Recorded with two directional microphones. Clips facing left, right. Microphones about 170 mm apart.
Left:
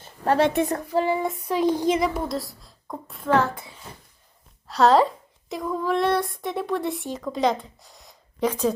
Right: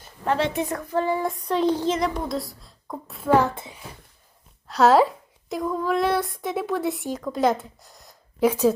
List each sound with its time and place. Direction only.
0.0 s a sound: 40° left (ahead or behind)
0.9 s child singing: 10° left (ahead or behind)
2.0 s speech: centre (ahead or behind)
3.2 s child singing: 10° right (ahead or behind)
3.5 s a child's voice: 25° right (ahead or behind)
4.7 s speech: centre (ahead or behind)